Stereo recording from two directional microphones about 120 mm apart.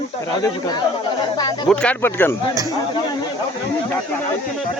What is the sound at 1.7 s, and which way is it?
Speech, 10° left (ahead or behind).